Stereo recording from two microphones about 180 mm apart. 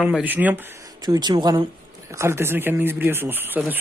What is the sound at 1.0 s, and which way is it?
Speech, 25° right (ahead or behind).